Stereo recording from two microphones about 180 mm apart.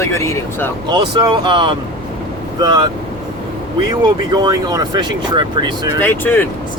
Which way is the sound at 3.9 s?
25° right (ahead or behind).